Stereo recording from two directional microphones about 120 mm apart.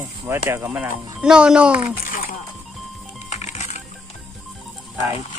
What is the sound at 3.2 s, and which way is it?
Music, 80° left.